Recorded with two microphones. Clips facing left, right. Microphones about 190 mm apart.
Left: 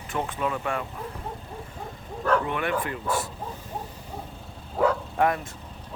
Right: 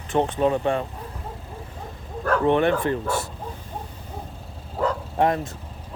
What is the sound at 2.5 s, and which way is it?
Speech, 30° right (ahead or behind).